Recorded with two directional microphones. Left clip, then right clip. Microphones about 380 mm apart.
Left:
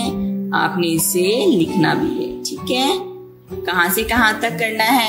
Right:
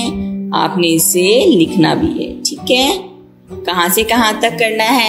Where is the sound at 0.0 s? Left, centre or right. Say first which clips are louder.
Right 2 dB; centre.